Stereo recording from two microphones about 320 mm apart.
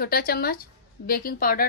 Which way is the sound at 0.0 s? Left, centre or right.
Left.